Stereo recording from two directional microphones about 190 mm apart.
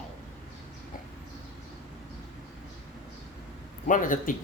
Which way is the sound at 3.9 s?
45° left (ahead or behind).